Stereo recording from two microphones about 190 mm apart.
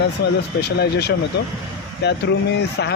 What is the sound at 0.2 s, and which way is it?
Speech, 60° left (ahead or behind).